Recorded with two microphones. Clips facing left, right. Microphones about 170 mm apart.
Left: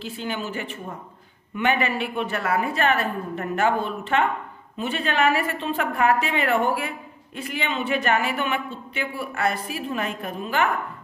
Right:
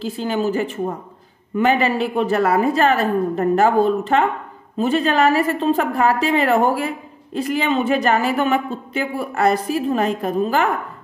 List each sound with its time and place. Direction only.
0.0 s a woman's voice: 35° right (ahead or behind)